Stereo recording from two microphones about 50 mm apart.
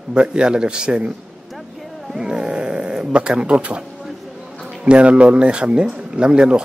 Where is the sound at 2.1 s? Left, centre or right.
Centre.